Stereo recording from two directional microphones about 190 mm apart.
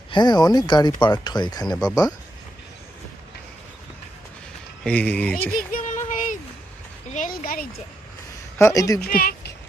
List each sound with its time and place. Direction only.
0.1 s speech: 20° left (ahead or behind)
4.8 s speech: 5° left (ahead or behind)
5.5 s a sound: 40° left (ahead or behind)
7.1 s speech: 45° left (ahead or behind)
8.5 s speech: 15° left (ahead or behind)
9.0 s speech: 50° left (ahead or behind)